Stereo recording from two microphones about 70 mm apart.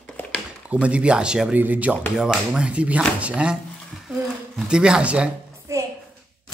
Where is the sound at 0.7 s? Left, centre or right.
Centre.